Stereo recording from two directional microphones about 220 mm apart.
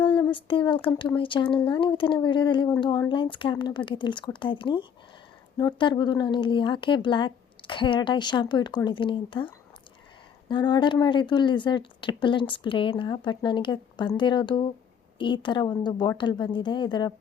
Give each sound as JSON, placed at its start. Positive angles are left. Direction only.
{"t": 0.0, "sound": "speech", "side_deg": 20}
{"t": 10.5, "sound": "speech", "side_deg": 20}